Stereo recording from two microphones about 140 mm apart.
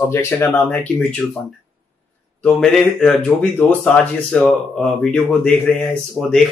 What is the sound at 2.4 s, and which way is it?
Speech, 5° left (ahead or behind).